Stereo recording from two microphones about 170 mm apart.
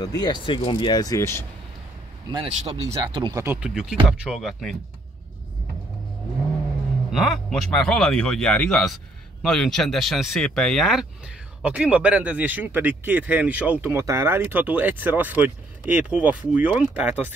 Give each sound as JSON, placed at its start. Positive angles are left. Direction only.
{"t": 0.0, "sound": "speech", "side_deg": 25}
{"t": 2.3, "sound": "speech", "side_deg": -25}
{"t": 3.4, "sound": "speech", "side_deg": -5}
{"t": 7.1, "sound": "speech", "side_deg": 0}